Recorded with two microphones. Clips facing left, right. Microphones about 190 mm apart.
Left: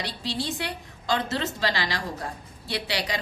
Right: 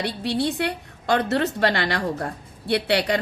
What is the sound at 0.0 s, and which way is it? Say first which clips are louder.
A woman's voice: right 7 dB; 60° right (ahead or behind).